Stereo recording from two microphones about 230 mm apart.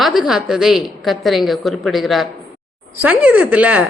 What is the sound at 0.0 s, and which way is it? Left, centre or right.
A woman's voice, centre.